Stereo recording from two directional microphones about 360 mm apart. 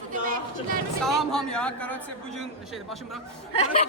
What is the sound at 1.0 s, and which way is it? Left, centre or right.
A woman's voice, centre.